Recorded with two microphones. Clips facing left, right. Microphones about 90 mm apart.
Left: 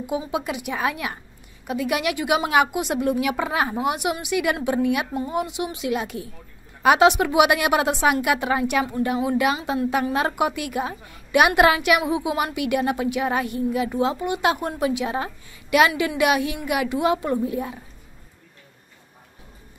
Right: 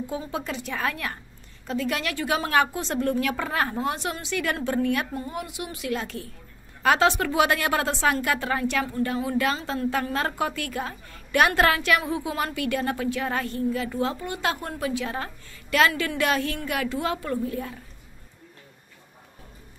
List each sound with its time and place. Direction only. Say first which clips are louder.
0.0 s a woman's voice: left 5 dB; 15° left (ahead or behind)